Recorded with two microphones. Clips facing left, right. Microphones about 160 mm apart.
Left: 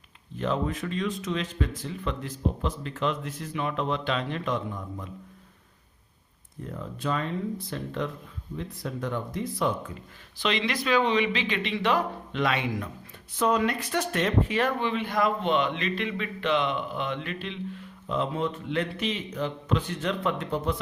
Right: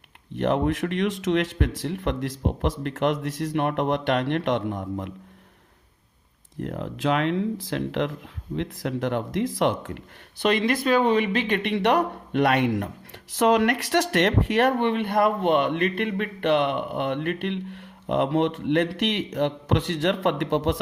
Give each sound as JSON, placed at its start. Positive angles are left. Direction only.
{"t": 0.3, "sound": "speech", "side_deg": -65}
{"t": 6.6, "sound": "speech", "side_deg": -75}
{"t": 10.4, "sound": "speech", "side_deg": -50}
{"t": 13.3, "sound": "speech", "side_deg": -75}
{"t": 14.8, "sound": "speech", "side_deg": -60}